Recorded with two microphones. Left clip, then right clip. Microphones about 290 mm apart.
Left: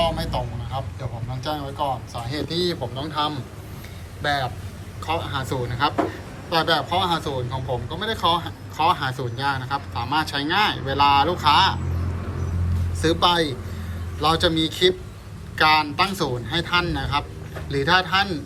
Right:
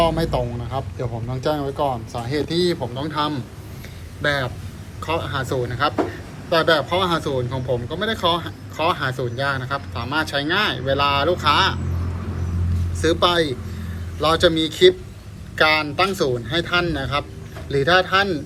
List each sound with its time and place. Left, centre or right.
0.0 s speech: centre
13.0 s speech: centre